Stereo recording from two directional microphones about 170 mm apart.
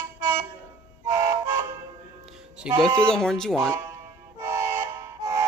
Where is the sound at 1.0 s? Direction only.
20° right (ahead or behind).